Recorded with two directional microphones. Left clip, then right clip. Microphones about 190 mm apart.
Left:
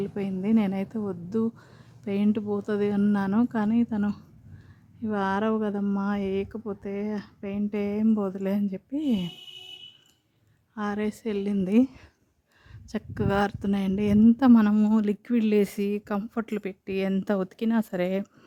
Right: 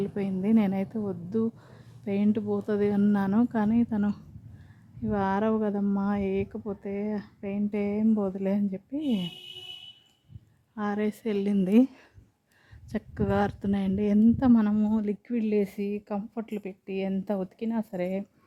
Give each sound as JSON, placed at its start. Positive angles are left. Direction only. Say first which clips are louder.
{"t": 0.0, "sound": "speech", "louder": "even", "side_deg": 5}
{"t": 10.8, "sound": "a woman's voice", "louder": "even", "side_deg": 5}